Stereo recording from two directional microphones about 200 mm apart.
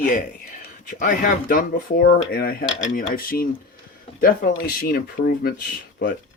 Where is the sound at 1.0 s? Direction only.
45° left (ahead or behind).